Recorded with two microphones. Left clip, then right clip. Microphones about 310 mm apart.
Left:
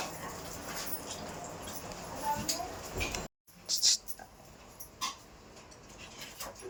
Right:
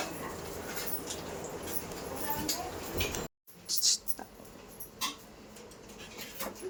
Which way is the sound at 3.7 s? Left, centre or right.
Centre.